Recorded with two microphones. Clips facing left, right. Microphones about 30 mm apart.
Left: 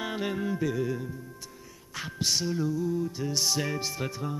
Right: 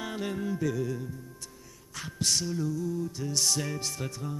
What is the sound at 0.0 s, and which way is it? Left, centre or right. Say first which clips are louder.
Music: left 2 dB; centre.